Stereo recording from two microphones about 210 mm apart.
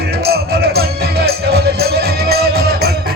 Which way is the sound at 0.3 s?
50° right (ahead or behind).